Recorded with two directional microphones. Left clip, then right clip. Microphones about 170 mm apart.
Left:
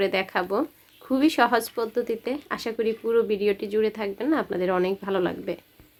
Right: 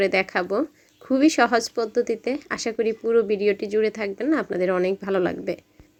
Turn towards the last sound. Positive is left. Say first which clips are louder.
# right 3 dB
turn(degrees=-20)  # may be behind; listen again after turning